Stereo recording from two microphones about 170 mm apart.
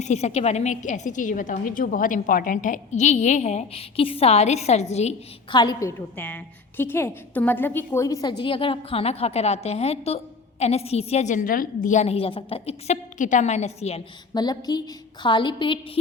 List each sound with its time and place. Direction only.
0.0 s a woman's voice: 40° left (ahead or behind)
5.5 s a woman's voice: 25° left (ahead or behind)
6.1 s a woman's voice: 10° left (ahead or behind); by 14.0 s 40° left (ahead or behind)
14.3 s a woman's voice: 25° left (ahead or behind)